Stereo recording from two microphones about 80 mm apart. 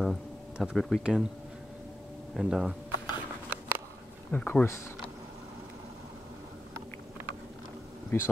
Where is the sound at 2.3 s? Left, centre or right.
Centre.